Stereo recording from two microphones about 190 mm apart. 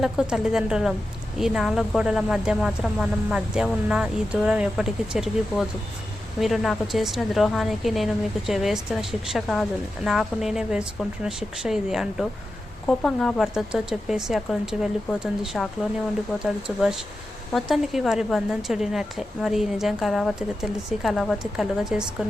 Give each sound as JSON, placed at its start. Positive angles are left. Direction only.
{"t": 0.0, "sound": "a woman's voice", "side_deg": -5}